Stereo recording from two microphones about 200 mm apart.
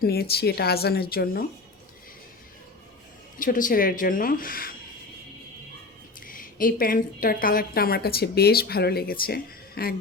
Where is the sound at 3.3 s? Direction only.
40° left (ahead or behind).